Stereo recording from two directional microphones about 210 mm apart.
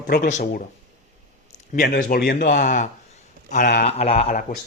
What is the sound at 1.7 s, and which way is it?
Speech, 45° left (ahead or behind).